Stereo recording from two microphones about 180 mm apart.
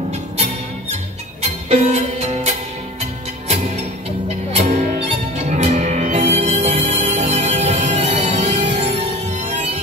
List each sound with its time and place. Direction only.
1.7 s music: 40° right (ahead or behind)
4.5 s music: 40° right (ahead or behind)